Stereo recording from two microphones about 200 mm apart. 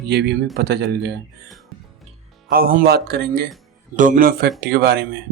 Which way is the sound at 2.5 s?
45° right (ahead or behind).